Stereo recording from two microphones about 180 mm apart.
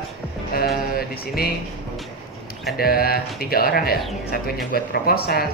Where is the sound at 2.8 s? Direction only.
55° left (ahead or behind).